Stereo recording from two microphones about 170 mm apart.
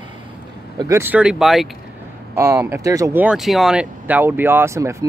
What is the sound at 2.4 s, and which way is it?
Speech, 15° right (ahead or behind).